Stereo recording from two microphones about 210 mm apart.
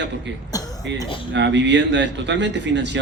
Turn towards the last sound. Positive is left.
turn(degrees=-60)  # may be behind; listen again after turning